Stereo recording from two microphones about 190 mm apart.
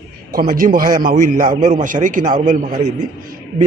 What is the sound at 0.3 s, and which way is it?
Speech, 50° right (ahead or behind).